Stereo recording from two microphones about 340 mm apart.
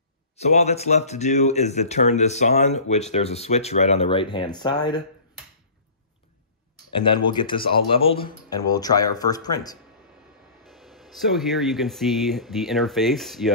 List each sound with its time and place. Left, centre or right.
0.4 s speech: centre
7.0 s speech: centre
10.6 s speech: centre